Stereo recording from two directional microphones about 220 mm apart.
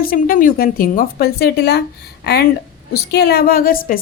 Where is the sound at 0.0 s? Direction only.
40° left (ahead or behind).